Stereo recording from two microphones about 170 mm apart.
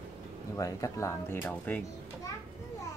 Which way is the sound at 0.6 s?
20° left (ahead or behind).